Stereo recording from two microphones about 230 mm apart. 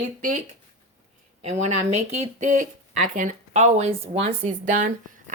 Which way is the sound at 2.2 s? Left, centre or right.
Right.